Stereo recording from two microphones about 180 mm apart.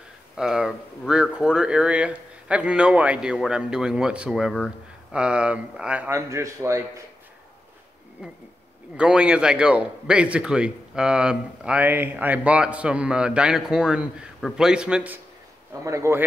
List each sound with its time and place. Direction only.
0.4 s speech: 5° right (ahead or behind)
8.2 s speech: 5° right (ahead or behind)
15.8 s speech: 15° right (ahead or behind)